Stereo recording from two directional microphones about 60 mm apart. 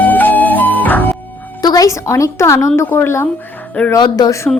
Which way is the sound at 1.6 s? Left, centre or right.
Left.